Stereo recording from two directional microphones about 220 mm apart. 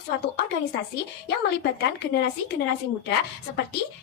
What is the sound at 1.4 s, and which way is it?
Speech, 50° left (ahead or behind).